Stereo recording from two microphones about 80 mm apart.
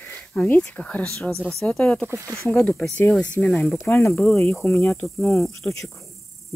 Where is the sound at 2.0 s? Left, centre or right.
Right.